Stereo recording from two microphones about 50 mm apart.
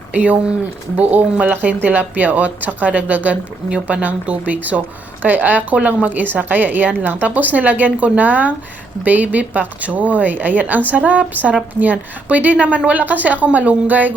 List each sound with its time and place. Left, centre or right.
0.1 s a woman's voice: right